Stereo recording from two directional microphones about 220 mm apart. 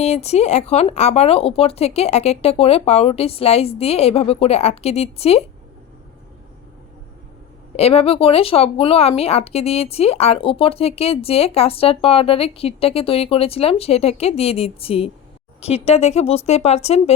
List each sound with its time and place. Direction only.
0.0 s speech: 30° left (ahead or behind)
7.8 s speech: 25° left (ahead or behind)